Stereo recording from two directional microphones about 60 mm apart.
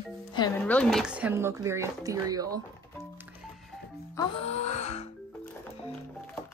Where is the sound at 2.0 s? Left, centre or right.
Right.